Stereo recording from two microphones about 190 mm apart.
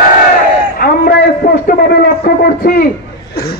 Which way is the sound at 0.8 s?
55° left (ahead or behind).